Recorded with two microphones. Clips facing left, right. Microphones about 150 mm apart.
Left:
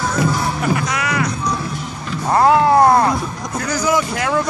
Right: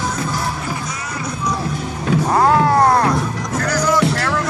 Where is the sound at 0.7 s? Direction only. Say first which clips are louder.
Left 7 dB; 75° left (ahead or behind).